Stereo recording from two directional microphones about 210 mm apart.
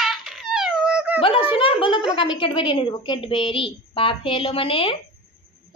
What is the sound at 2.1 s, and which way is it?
A woman's voice, 20° left (ahead or behind).